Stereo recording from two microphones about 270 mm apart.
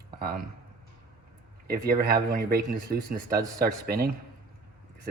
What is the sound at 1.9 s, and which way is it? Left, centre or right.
Speech, right.